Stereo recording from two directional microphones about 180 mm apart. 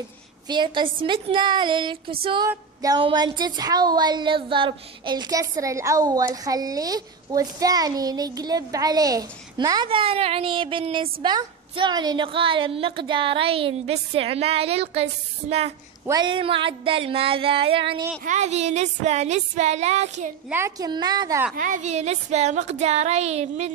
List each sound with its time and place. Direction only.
0.5 s speech: 25° right (ahead or behind)
16.1 s speech: 25° right (ahead or behind)
18.2 s speech: 40° right (ahead or behind)
20.4 s speech: 15° right (ahead or behind)
21.5 s speech: 45° right (ahead or behind)